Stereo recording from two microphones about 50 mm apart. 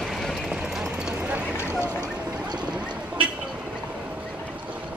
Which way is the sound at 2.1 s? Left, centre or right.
Right.